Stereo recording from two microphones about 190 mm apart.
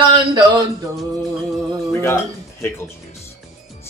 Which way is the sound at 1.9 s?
10° left (ahead or behind).